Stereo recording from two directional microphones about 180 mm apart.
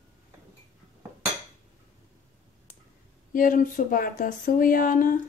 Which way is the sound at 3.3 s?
50° left (ahead or behind).